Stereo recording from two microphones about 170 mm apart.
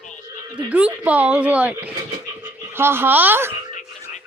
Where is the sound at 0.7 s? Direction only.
10° right (ahead or behind).